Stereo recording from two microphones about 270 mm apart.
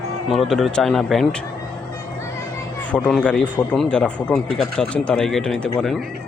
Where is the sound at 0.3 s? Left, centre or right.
Centre.